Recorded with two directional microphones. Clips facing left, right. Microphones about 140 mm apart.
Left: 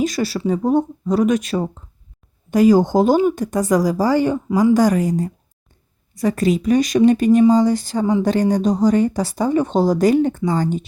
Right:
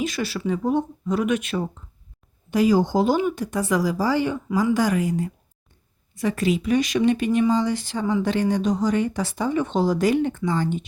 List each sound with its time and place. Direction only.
0.0 s speech: 40° left (ahead or behind)